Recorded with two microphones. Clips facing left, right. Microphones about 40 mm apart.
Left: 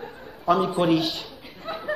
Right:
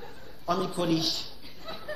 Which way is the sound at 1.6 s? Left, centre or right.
Left.